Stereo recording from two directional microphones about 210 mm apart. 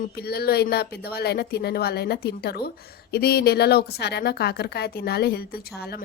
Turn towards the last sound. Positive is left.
turn(degrees=50)  # may be behind; listen again after turning